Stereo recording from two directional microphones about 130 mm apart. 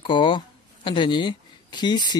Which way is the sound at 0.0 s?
40° left (ahead or behind).